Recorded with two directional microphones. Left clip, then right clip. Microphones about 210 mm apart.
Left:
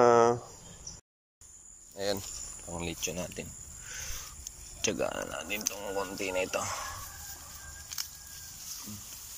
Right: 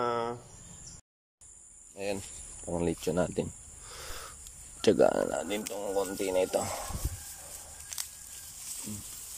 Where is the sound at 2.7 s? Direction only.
30° right (ahead or behind).